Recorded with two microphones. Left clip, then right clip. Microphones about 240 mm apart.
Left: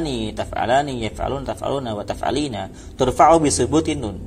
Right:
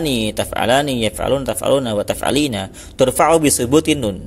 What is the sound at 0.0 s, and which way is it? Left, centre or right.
Speech, right.